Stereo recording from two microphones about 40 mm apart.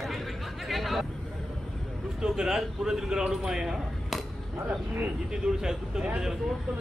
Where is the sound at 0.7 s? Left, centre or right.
Centre.